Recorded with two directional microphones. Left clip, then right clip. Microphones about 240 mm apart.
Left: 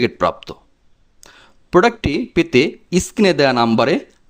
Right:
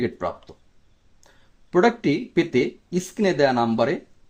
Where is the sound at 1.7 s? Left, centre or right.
Left.